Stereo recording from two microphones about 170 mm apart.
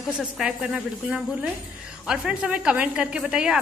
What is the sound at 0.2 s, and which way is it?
A woman's voice, 5° right (ahead or behind).